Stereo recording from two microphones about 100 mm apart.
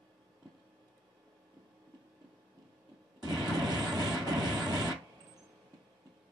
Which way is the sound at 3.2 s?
40° right (ahead or behind).